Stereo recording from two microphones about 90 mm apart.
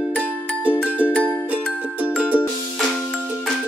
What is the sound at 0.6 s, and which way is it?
Music, 15° right (ahead or behind).